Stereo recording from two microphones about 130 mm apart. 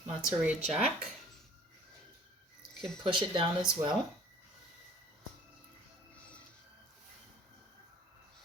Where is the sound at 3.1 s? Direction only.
40° right (ahead or behind).